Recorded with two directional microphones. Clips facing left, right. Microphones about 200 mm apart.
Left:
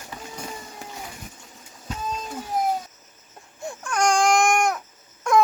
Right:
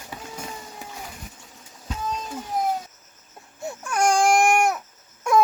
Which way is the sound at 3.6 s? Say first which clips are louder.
Right 1 dB; 5° right (ahead or behind).